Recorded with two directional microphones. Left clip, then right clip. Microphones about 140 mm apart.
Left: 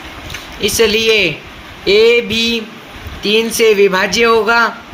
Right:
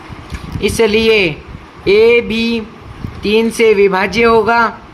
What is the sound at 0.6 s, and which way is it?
Speech, 75° right (ahead or behind).